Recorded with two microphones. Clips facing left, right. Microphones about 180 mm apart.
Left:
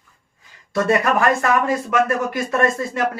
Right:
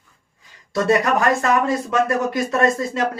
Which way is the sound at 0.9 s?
20° right (ahead or behind).